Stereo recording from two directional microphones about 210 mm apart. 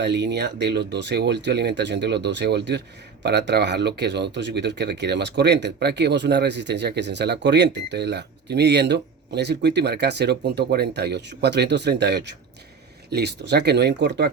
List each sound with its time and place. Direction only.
0.0 s speech: 55° right (ahead or behind)